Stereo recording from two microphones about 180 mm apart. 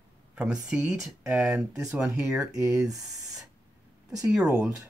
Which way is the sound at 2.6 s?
15° right (ahead or behind).